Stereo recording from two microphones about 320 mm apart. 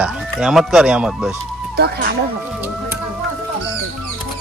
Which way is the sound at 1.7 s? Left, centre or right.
Right.